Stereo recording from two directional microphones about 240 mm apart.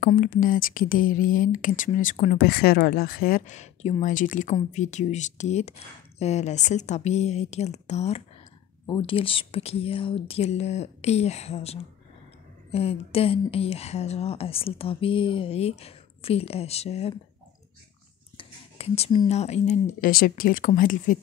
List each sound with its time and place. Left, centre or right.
0.0 s speech: left
18.4 s speech: left